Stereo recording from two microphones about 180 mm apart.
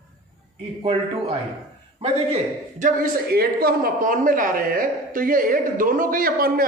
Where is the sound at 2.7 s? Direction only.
50° right (ahead or behind).